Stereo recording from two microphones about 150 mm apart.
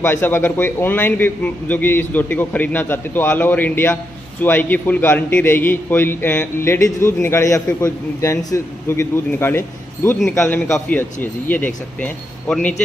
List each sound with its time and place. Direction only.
0.0 s a man's voice: 15° left (ahead or behind)